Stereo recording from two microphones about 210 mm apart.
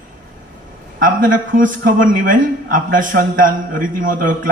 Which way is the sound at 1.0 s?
40° right (ahead or behind).